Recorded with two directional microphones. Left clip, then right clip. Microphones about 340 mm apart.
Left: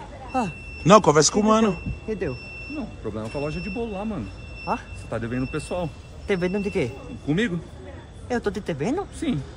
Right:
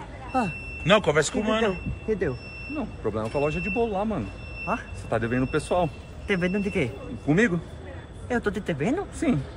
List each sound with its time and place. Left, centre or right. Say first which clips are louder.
0.3 s a man's voice: even; centre
2.7 s speech: right 4 dB; centre
6.2 s speech: left 2 dB; left
7.2 s speech: right 3 dB; centre
8.3 s speech: left 1 dB; centre
9.2 s speech: right 4 dB; centre